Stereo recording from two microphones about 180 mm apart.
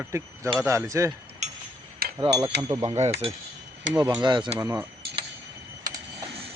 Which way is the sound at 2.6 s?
20° right (ahead or behind).